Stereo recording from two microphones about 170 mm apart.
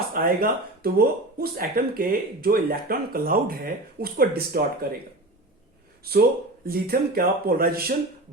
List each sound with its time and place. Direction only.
0.1 s speech: 60° right (ahead or behind)
6.0 s speech: 65° right (ahead or behind)